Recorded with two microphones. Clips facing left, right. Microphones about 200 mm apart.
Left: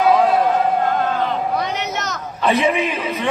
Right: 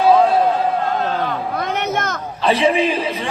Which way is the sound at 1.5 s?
55° right (ahead or behind).